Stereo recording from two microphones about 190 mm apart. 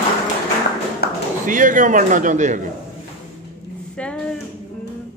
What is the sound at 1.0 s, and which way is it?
Tap, 55° left (ahead or behind).